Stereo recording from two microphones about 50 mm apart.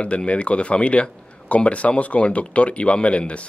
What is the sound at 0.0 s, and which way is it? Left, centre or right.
Speech, left.